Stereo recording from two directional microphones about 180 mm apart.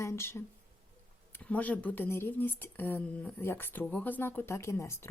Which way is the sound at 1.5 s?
10° left (ahead or behind).